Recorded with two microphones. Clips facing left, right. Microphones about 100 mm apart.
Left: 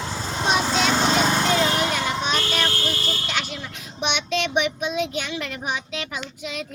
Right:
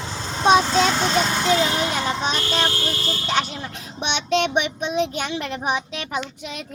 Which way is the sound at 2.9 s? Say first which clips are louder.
Right 1 dB; centre (ahead or behind).